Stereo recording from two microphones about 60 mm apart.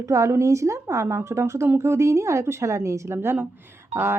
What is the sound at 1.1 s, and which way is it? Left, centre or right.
Speech, right.